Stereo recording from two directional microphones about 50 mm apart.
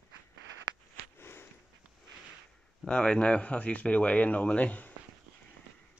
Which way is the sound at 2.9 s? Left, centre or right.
Centre.